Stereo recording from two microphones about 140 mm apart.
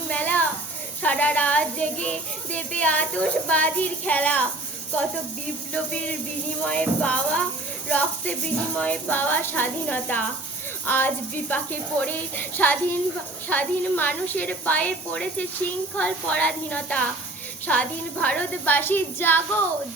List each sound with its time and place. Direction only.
0.1 s a sound: 10° left (ahead or behind)
1.0 s a child's voice: 10° left (ahead or behind)
5.7 s a child's voice: 10° left (ahead or behind)